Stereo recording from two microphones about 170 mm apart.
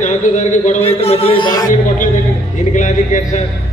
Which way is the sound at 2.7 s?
45° left (ahead or behind).